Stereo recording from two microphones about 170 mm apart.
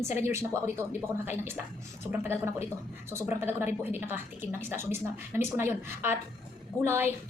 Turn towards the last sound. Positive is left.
turn(degrees=-15)  # may be behind; listen again after turning